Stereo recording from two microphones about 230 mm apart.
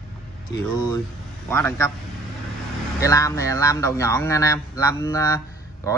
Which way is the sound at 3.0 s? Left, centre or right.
Centre.